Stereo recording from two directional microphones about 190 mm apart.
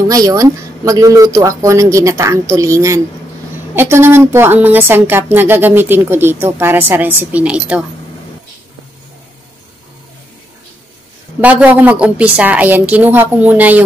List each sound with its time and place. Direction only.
0.1 s speech: 20° right (ahead or behind)
11.4 s speech: 10° right (ahead or behind)